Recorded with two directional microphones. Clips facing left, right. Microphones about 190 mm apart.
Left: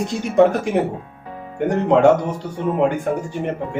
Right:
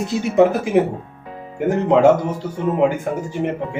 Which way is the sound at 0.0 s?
5° right (ahead or behind).